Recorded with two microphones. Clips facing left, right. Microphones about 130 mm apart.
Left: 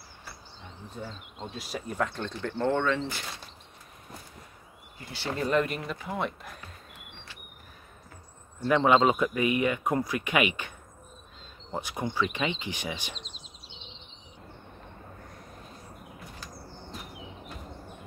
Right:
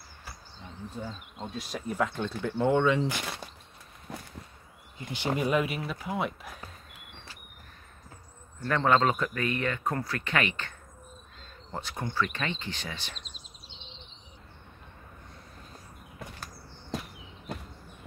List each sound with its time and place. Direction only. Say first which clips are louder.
1.5 s speech: right 2 dB; centre (ahead or behind)
4.1 s a sound: right 6 dB; 80° right
4.9 s speech: right 3 dB; 20° right (ahead or behind); by 7.0 s centre (ahead or behind)
8.6 s a man's voice: left 3 dB; 10° left (ahead or behind)
11.7 s a man's voice: left 2 dB; 15° left (ahead or behind)
16.9 s a sound: right 9 dB; 90° right